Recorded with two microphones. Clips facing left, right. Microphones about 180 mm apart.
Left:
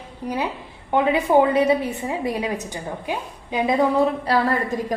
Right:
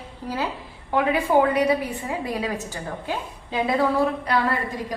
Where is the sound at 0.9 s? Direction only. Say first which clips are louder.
Left 2 dB; 20° left (ahead or behind).